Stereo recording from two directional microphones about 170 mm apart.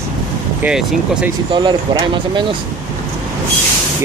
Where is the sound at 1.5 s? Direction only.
25° right (ahead or behind).